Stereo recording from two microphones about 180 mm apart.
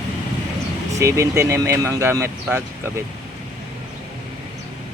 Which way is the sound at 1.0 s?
15° right (ahead or behind).